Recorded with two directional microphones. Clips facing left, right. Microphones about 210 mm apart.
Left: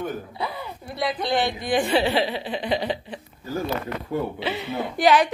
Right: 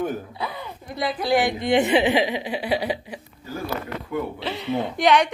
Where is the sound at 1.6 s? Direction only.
25° right (ahead or behind).